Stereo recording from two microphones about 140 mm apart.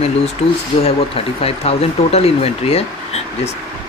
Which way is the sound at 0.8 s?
45° left (ahead or behind).